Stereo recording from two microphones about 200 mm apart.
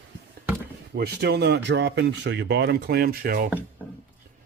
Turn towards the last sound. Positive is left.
turn(degrees=-50)  # may be behind; listen again after turning